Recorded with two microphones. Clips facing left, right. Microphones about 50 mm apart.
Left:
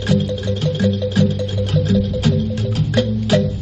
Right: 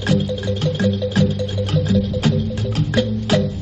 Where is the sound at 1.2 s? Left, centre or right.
Centre.